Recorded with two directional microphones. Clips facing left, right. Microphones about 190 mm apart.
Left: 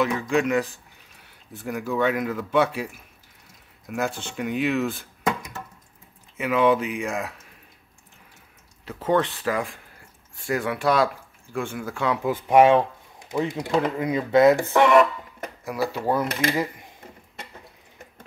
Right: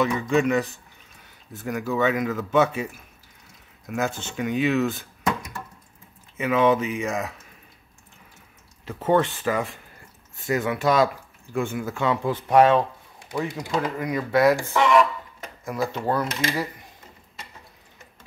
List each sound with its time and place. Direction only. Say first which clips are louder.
0.0 s speech: right 1 dB; centre (ahead or behind)
6.3 s speech: even; centre (ahead or behind)
8.8 s speech: right 1 dB; 5° right (ahead or behind); by 14.6 s 20° left (ahead or behind)
14.6 s music: left 2 dB; 60° left (ahead or behind)
15.6 s speech: even; 5° left (ahead or behind)
16.5 s speech: left 3 dB; 20° left (ahead or behind)